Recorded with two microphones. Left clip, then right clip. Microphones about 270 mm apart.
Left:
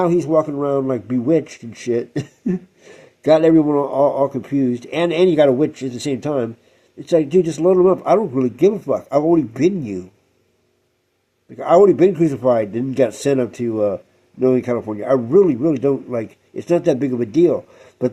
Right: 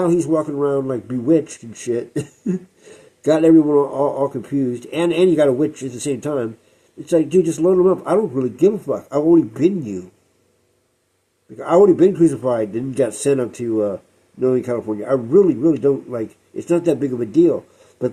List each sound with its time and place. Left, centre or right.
0.0 s a man's voice: left
11.5 s a man's voice: left